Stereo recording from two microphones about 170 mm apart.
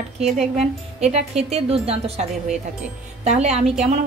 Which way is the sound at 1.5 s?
35° right (ahead or behind).